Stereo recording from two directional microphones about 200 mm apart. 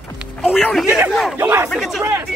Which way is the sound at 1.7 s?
Centre (ahead or behind).